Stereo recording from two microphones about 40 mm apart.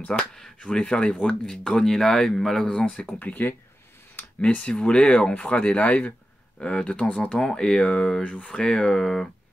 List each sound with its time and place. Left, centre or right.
0.1 s speech: centre
1.5 s speech: centre
2.8 s speech: left
3.4 s speech: left
4.6 s speech: left
6.6 s speech: left
8.2 s speech: left; by 9.3 s centre